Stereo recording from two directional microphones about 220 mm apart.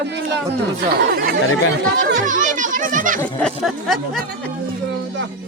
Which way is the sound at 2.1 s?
35° right (ahead or behind).